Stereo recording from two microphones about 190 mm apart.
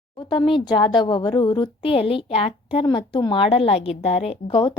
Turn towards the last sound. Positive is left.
turn(degrees=25)  # may be behind; listen again after turning